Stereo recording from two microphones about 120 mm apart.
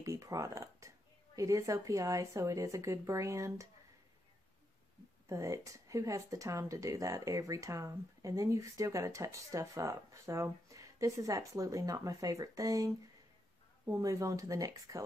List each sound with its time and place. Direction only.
0.0 s speech: 25° right (ahead or behind)
5.3 s speech: 25° right (ahead or behind)